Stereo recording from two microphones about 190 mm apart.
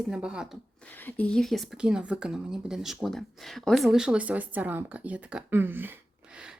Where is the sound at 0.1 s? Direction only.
5° right (ahead or behind).